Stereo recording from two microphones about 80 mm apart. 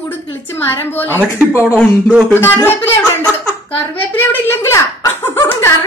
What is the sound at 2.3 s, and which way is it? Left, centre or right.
Speech, left.